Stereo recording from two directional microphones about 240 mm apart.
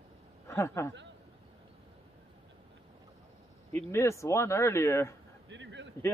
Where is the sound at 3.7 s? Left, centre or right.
Centre.